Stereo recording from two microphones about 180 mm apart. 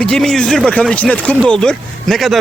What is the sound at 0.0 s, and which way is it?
Speech, 5° left (ahead or behind).